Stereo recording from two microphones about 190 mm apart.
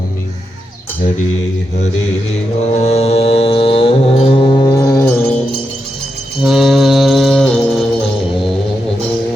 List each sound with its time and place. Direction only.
2.7 s music: 35° left (ahead or behind); by 5.2 s 20° left (ahead or behind)
6.4 s music: centre (ahead or behind)